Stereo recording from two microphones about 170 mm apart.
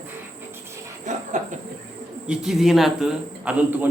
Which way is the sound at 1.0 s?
45° right (ahead or behind).